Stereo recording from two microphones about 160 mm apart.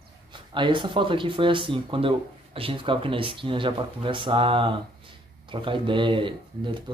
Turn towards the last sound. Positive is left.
turn(degrees=-30)  # may be behind; listen again after turning